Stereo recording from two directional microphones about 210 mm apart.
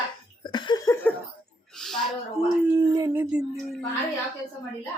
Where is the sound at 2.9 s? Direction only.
15° right (ahead or behind).